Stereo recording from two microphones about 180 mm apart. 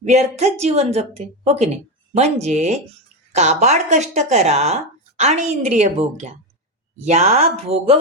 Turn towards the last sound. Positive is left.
turn(degrees=-35)  # may be behind; listen again after turning